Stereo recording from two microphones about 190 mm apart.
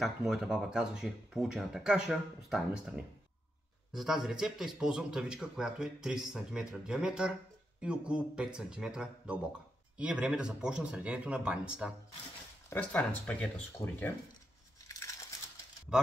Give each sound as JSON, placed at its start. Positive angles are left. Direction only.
{"t": 0.0, "sound": "speech", "side_deg": 0}
{"t": 12.6, "sound": "speech", "side_deg": 10}
{"t": 14.9, "sound": "crumpling", "side_deg": 15}